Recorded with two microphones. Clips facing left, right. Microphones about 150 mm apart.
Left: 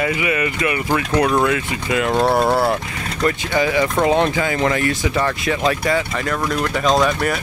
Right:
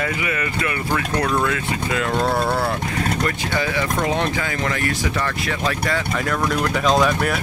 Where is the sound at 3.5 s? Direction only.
15° left (ahead or behind).